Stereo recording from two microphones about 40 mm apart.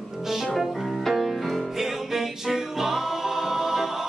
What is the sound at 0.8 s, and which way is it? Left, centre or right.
Music, centre.